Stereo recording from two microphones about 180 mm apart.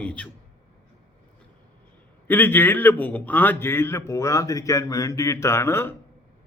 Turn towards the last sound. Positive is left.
turn(degrees=15)  # may be behind; listen again after turning